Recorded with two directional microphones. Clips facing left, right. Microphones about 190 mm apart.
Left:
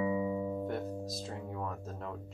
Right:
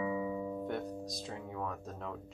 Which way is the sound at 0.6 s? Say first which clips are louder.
Left 2 dB; centre (ahead or behind).